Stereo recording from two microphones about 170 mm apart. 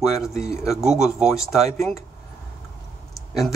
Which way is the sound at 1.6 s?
40° right (ahead or behind).